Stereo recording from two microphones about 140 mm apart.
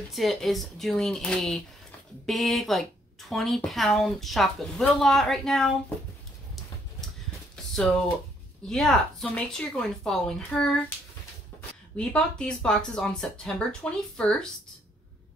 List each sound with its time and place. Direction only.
0.1 s speech: centre (ahead or behind)
8.6 s speech: centre (ahead or behind)
12.0 s speech: 5° left (ahead or behind)